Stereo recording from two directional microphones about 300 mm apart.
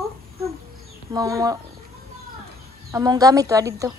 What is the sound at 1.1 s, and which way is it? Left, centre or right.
Speech, centre.